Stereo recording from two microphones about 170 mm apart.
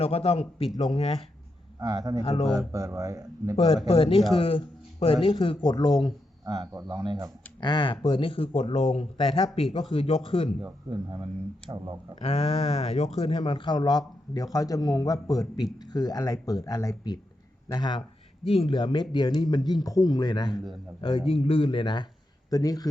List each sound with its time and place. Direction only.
0.0 s speech: 35° left (ahead or behind)
1.8 s speech: 25° right (ahead or behind)
2.2 s speech: 35° left (ahead or behind)
2.5 s speech: 20° right (ahead or behind)
3.5 s speech: 35° left (ahead or behind)
6.4 s speech: 20° right (ahead or behind)
7.6 s speech: 25° left (ahead or behind)
10.6 s speech: 30° right (ahead or behind)
12.2 s speech: 35° left (ahead or behind)